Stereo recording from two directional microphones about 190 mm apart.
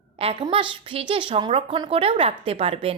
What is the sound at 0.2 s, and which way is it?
A woman's voice, 30° right (ahead or behind).